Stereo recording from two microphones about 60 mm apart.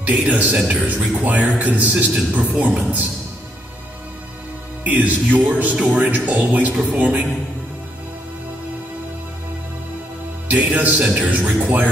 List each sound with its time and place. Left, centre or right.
0.0 s speech: right
4.8 s speech: right
10.5 s speech: right